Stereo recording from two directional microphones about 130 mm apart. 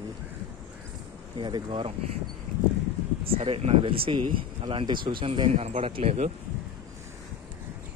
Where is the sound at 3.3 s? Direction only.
45° right (ahead or behind).